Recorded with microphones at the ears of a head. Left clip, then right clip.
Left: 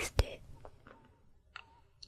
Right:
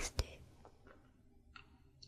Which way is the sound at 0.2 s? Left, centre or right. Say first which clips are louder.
Left 9 dB; left.